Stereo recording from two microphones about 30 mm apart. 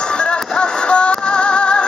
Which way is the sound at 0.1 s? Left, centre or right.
Left.